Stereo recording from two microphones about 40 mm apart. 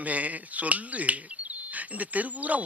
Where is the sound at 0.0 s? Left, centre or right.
Right.